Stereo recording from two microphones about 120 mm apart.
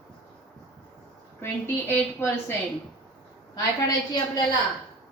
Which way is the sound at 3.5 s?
35° left (ahead or behind).